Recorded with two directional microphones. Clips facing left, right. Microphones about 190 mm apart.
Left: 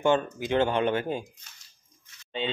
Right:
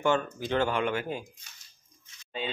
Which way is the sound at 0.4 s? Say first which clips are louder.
Left 3 dB; 20° left (ahead or behind).